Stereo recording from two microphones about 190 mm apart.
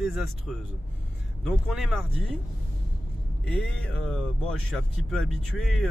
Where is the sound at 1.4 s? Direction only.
Centre (ahead or behind).